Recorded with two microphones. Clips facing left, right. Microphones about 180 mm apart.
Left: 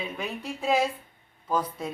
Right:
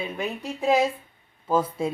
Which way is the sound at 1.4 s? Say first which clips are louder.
Right 5 dB; 25° right (ahead or behind).